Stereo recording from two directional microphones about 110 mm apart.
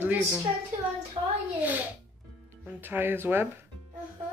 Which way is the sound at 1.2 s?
50° right (ahead or behind).